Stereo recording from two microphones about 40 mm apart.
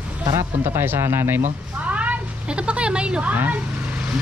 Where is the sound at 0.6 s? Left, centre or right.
Right.